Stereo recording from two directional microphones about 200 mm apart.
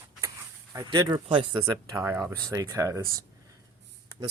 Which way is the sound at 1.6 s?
10° right (ahead or behind).